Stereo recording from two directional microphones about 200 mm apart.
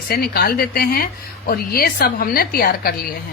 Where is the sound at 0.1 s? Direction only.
50° left (ahead or behind).